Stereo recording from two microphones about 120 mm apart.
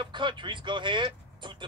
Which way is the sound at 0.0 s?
40° right (ahead or behind).